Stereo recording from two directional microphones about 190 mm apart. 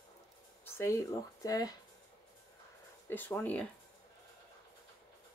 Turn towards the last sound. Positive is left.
turn(degrees=10)  # may be behind; listen again after turning